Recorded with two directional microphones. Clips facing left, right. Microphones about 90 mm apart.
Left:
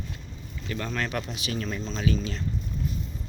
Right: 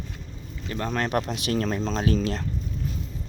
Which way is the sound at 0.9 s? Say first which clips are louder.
Right 6 dB; 45° right (ahead or behind).